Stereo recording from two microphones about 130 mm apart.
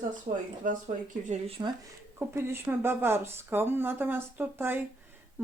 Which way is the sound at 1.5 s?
45° right (ahead or behind).